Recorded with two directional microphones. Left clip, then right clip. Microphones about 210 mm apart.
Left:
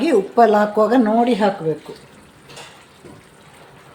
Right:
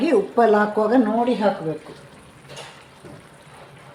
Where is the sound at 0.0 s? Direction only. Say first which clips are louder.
Left 3 dB; 15° left (ahead or behind).